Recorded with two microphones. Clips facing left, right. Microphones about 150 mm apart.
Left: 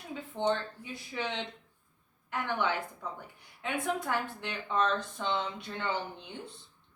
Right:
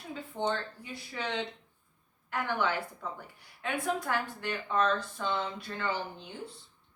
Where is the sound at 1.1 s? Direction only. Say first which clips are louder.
Right 1 dB; 20° left (ahead or behind).